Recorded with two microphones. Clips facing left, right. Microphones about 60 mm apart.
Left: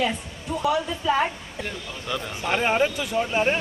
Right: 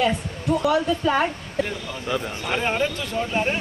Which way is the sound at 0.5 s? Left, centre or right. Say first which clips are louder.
Right 7 dB; right.